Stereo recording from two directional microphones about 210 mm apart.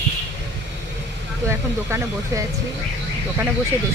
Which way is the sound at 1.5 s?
15° right (ahead or behind).